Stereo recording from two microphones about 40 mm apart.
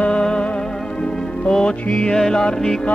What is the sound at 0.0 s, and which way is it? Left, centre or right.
Music, left.